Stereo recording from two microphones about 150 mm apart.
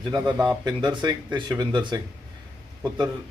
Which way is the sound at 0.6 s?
30° right (ahead or behind).